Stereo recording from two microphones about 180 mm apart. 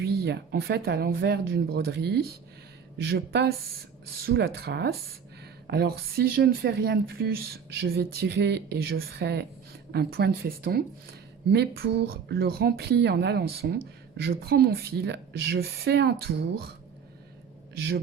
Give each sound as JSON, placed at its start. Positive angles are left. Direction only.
{"t": 0.0, "sound": "a woman's voice", "side_deg": -60}